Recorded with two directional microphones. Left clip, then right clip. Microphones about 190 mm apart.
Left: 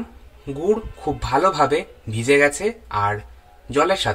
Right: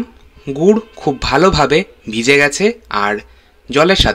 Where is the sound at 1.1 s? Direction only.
30° right (ahead or behind).